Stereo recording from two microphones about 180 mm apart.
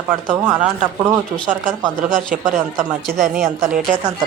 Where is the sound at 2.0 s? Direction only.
50° right (ahead or behind).